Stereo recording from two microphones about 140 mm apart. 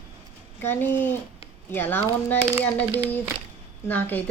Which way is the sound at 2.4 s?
20° right (ahead or behind).